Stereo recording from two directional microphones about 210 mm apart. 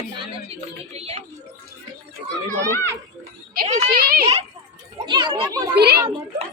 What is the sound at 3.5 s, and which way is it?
Speech, 45° right (ahead or behind).